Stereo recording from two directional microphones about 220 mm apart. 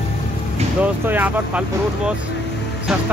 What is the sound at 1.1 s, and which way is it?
Speech, 5° right (ahead or behind).